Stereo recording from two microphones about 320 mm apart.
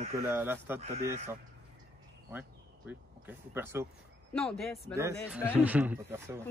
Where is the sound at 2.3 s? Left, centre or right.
Centre.